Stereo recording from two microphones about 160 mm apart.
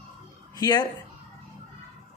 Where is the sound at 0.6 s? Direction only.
25° left (ahead or behind).